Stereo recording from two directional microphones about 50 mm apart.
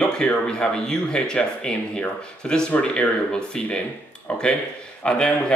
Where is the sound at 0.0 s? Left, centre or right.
Centre.